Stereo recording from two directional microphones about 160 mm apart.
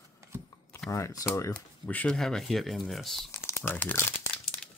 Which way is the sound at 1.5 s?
10° left (ahead or behind).